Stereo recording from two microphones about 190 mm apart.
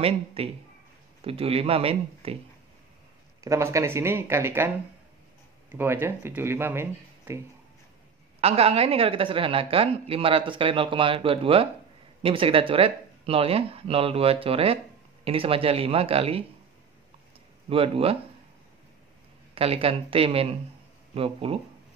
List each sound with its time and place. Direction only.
0.0 s a man's voice: 30° right (ahead or behind)
3.3 s speech: 15° right (ahead or behind)
5.7 s speech: 10° right (ahead or behind)
8.4 s speech: 30° right (ahead or behind)
17.6 s speech: 30° right (ahead or behind)
19.5 s speech: 30° right (ahead or behind)